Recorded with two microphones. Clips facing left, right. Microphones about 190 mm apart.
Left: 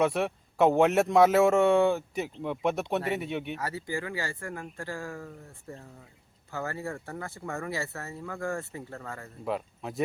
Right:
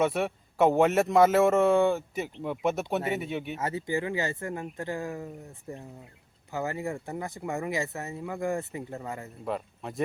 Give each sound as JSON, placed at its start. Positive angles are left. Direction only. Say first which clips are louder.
{"t": 0.0, "sound": "a man's voice", "louder": "even", "side_deg": 0}
{"t": 3.6, "sound": "speech", "louder": "right 4 dB", "side_deg": -20}
{"t": 9.4, "sound": "a man's voice", "louder": "left 2 dB", "side_deg": 0}